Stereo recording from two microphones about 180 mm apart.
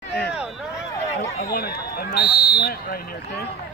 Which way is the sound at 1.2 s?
60° left (ahead or behind).